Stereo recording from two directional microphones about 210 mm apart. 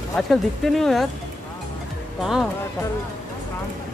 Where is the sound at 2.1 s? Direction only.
Centre (ahead or behind).